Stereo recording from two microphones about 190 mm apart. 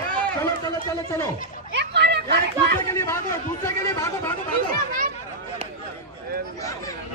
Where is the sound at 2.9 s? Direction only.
15° left (ahead or behind).